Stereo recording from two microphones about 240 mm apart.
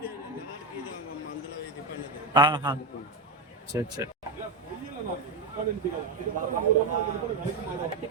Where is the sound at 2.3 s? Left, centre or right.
Centre.